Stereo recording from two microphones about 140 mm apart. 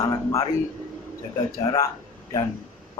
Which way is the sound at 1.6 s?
25° left (ahead or behind).